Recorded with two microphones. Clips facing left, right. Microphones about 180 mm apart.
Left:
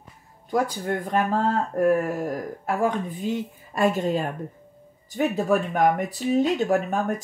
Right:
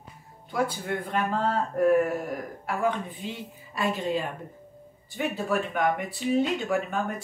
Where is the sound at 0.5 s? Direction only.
40° left (ahead or behind).